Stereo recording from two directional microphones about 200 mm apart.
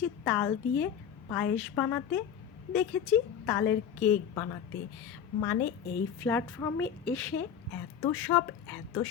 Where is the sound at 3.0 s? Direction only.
10° left (ahead or behind).